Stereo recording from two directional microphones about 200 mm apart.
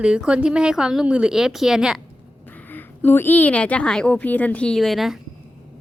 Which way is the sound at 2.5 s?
10° left (ahead or behind).